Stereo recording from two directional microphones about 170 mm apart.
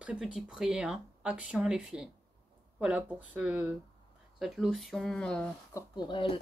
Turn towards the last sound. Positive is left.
turn(degrees=30)  # may be behind; listen again after turning